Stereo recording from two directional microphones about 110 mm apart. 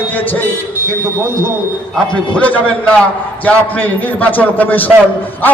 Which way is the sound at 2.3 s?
15° left (ahead or behind).